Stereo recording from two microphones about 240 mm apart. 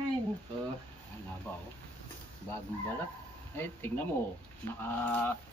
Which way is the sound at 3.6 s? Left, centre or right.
Centre.